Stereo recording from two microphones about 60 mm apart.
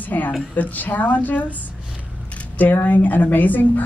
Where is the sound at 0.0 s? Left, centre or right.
Left.